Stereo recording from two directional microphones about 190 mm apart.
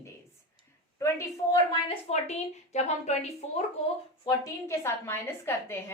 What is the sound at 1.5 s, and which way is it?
A woman's voice, 30° left (ahead or behind).